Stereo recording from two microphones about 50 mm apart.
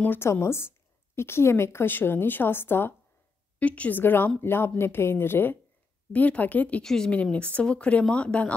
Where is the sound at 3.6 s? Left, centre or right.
Left.